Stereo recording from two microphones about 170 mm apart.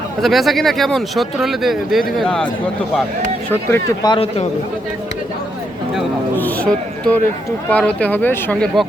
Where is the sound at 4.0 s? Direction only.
30° left (ahead or behind).